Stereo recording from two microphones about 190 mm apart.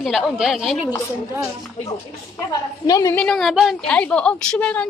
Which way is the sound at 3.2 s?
Centre (ahead or behind).